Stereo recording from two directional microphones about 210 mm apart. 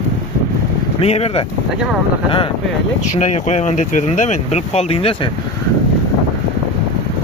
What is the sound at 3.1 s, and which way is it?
Speech, 30° left (ahead or behind).